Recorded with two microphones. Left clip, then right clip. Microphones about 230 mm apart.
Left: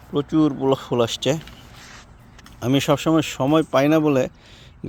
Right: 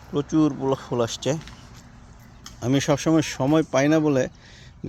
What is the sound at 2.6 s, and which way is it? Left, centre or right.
A man's voice, centre.